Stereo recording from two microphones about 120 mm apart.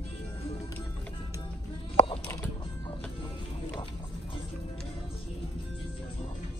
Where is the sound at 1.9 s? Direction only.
50° left (ahead or behind).